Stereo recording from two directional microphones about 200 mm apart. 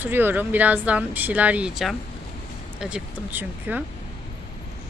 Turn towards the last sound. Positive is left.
turn(degrees=-10)  # may be behind; listen again after turning